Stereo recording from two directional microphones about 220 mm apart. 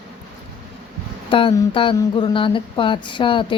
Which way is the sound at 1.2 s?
25° left (ahead or behind).